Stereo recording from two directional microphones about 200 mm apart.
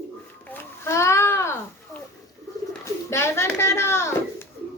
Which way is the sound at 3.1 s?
15° left (ahead or behind).